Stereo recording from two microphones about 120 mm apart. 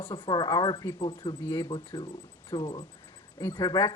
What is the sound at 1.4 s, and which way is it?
Speech, 20° left (ahead or behind).